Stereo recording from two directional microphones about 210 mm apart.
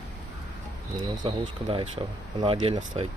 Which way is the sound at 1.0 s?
25° right (ahead or behind).